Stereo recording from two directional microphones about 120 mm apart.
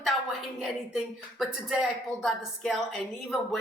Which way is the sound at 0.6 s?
Centre (ahead or behind).